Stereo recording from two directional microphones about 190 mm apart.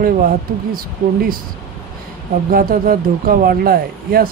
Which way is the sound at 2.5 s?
50° right (ahead or behind).